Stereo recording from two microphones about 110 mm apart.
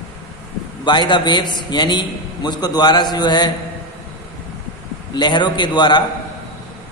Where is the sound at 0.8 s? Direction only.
45° left (ahead or behind).